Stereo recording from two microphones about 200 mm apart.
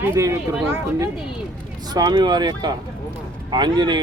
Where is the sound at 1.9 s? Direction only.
20° right (ahead or behind).